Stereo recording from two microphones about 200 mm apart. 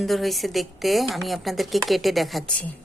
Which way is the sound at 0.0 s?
Centre (ahead or behind).